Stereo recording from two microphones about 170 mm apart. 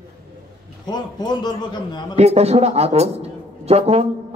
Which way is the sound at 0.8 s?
25° left (ahead or behind).